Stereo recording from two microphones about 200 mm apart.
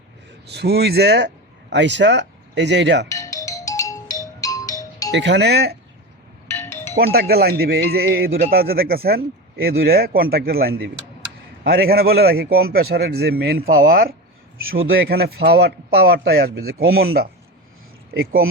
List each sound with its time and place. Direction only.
0.5 s speech: 55° right (ahead or behind)
3.1 s music: 15° left (ahead or behind)
5.1 s speech: 60° right (ahead or behind)
6.5 s music: 15° left (ahead or behind)
6.9 s a man's voice: 50° right (ahead or behind)
14.6 s a man's voice: 85° right
15.1 s a man's voice: 50° right (ahead or behind)